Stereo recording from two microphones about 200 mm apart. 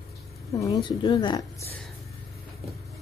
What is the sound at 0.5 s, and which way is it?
A woman's voice, 20° left (ahead or behind).